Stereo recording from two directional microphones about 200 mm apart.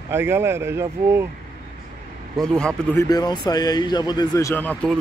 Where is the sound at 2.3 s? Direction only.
5° left (ahead or behind).